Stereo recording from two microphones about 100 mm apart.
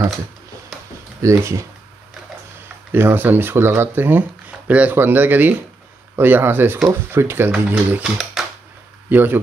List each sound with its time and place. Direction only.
1.2 s speech: 30° right (ahead or behind)
2.9 s speech: 20° right (ahead or behind)
7.7 s speech: 10° right (ahead or behind)
9.1 s speech: 20° right (ahead or behind)